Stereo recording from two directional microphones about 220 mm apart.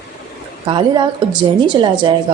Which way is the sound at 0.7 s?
20° right (ahead or behind).